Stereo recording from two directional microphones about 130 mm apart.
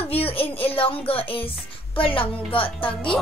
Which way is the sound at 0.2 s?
45° left (ahead or behind).